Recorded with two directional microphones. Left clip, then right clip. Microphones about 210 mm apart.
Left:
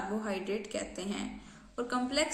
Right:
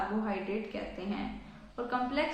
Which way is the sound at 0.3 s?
35° left (ahead or behind).